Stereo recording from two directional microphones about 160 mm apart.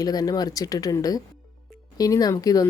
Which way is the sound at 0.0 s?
25° left (ahead or behind).